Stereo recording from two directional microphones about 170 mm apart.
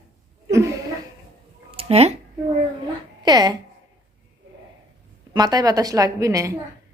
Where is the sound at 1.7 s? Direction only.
35° right (ahead or behind).